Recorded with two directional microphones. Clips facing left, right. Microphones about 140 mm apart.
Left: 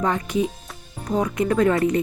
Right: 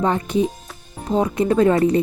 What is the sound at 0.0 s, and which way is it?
Speech, 30° right (ahead or behind).